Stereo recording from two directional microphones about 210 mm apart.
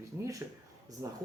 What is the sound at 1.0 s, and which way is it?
Speech, 15° right (ahead or behind).